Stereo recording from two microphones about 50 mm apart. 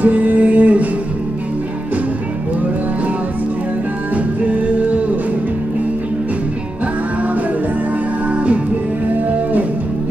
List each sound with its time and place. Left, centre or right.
0.0 s music: right
4.1 s music: right